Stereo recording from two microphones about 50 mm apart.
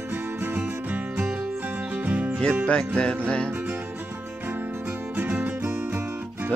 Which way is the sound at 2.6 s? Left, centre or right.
Left.